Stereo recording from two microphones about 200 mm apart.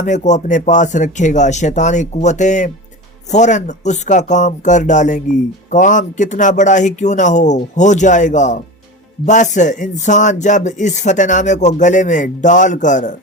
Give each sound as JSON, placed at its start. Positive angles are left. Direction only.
{"t": 0.0, "sound": "speech", "side_deg": 35}